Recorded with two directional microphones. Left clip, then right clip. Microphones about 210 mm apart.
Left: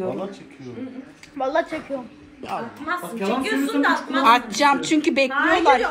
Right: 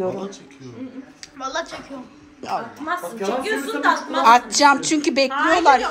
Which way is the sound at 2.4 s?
5° right (ahead or behind).